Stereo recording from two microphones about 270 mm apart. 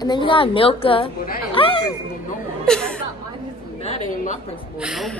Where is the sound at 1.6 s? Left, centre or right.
Centre.